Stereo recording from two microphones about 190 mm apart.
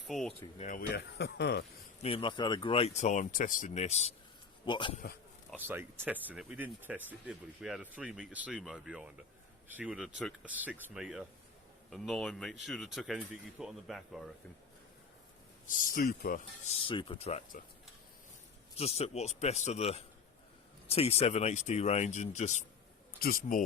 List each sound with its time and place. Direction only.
0.1 s speech: centre (ahead or behind)
0.6 s speech: 45° left (ahead or behind)
0.9 s speech: 60° left (ahead or behind)
2.0 s speech: 30° left (ahead or behind)
4.6 s a man's voice: 25° left (ahead or behind)
5.5 s speech: 10° right (ahead or behind)
15.6 s speech: 45° left (ahead or behind)
16.6 s speech: 30° left (ahead or behind)
18.8 s speech: 35° left (ahead or behind)